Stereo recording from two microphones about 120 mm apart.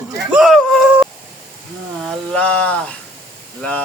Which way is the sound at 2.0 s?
5° left (ahead or behind).